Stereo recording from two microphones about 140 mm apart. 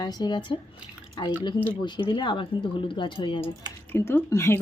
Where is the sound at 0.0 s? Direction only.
30° left (ahead or behind).